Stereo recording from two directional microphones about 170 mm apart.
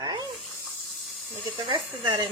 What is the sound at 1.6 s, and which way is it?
Speech, 30° right (ahead or behind).